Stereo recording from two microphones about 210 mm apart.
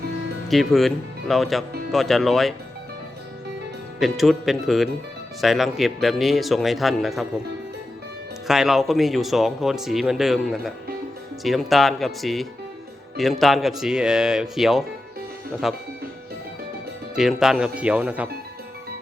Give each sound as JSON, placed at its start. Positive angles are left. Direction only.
{"t": 0.4, "sound": "speech", "side_deg": 0}
{"t": 4.0, "sound": "speech", "side_deg": 0}
{"t": 8.4, "sound": "speech", "side_deg": 0}
{"t": 17.2, "sound": "speech", "side_deg": 0}